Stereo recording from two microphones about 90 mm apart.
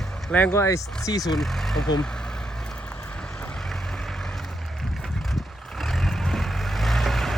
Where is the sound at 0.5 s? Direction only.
35° left (ahead or behind).